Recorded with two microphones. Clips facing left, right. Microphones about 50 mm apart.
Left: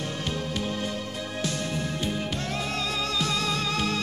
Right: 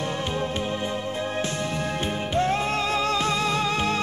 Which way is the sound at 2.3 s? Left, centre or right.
Right.